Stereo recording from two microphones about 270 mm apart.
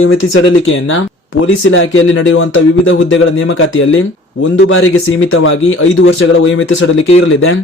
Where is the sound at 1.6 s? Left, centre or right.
Left.